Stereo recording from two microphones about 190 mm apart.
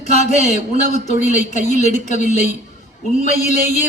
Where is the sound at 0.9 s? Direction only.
40° left (ahead or behind).